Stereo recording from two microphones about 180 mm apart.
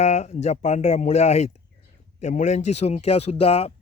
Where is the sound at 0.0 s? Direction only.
40° left (ahead or behind).